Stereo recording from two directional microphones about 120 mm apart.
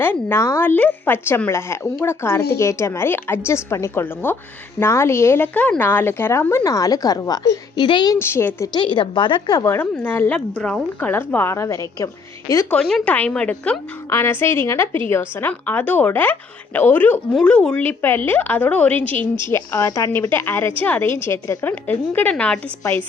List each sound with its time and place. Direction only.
0.0 s speech: 20° left (ahead or behind)
6.7 s a woman's voice: 30° left (ahead or behind)
8.2 s speech: 20° left (ahead or behind)
8.7 s a woman's voice: 40° left (ahead or behind)
9.6 s a woman's voice: 15° left (ahead or behind)
12.7 s a woman's voice: 5° left (ahead or behind)
14.1 s a woman's voice: 20° left (ahead or behind)
19.7 s speech: 30° left (ahead or behind)
20.3 s a woman's voice: 15° left (ahead or behind)